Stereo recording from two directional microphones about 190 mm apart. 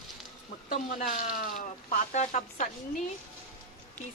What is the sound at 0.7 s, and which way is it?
Speech, 40° left (ahead or behind).